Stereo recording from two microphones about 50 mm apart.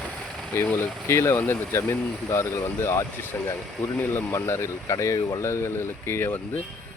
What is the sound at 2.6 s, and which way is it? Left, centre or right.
Speech, left.